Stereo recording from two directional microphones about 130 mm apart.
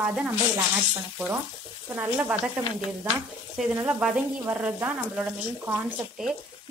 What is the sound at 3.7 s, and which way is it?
Speech, 20° right (ahead or behind).